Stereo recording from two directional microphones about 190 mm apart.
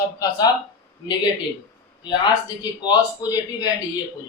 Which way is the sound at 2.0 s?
25° left (ahead or behind).